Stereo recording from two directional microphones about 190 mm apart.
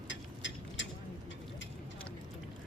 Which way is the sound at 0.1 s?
70° left (ahead or behind).